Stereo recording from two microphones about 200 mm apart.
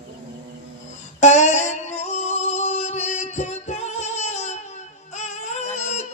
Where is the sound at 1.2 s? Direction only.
35° left (ahead or behind).